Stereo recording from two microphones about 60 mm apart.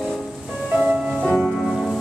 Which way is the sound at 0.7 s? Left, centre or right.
Centre.